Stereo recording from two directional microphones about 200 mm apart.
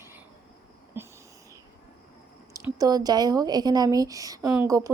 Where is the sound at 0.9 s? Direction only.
10° right (ahead or behind).